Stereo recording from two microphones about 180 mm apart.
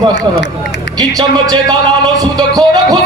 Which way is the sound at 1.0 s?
25° right (ahead or behind).